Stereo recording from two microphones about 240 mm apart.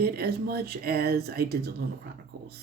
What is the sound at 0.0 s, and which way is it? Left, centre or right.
Speech, right.